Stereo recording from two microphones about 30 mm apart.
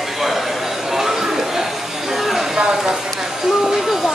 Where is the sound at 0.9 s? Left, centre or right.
Centre.